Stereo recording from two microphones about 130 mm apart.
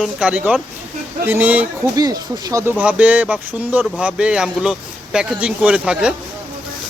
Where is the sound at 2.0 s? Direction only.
30° right (ahead or behind).